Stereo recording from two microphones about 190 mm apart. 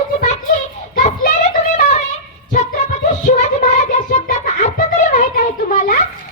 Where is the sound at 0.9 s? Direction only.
45° left (ahead or behind).